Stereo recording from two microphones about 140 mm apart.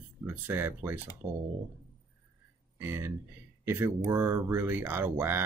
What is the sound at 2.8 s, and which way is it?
Speech, 15° right (ahead or behind).